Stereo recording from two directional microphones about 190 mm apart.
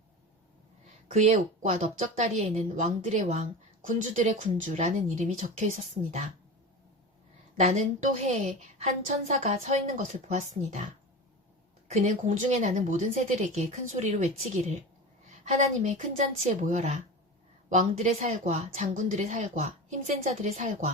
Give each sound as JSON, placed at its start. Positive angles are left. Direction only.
{"t": 1.1, "sound": "a woman's voice", "side_deg": -40}
{"t": 7.5, "sound": "a woman's voice", "side_deg": -40}
{"t": 11.9, "sound": "a woman's voice", "side_deg": -35}